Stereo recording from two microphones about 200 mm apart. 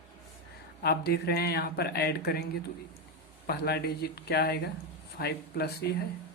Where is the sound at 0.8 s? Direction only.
50° left (ahead or behind).